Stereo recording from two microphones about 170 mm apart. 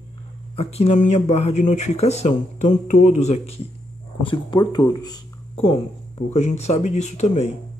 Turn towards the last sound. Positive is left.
turn(degrees=40)  # may be behind; listen again after turning